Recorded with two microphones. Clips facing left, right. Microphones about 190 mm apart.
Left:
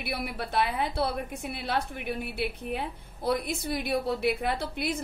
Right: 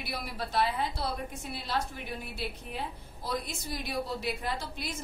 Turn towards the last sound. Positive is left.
turn(degrees=60)  # may be behind; listen again after turning